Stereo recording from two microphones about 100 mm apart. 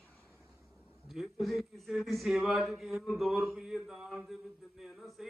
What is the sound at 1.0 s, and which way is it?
Speech, centre (ahead or behind).